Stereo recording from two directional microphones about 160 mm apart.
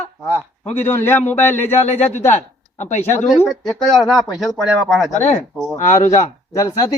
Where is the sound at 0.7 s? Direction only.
15° left (ahead or behind).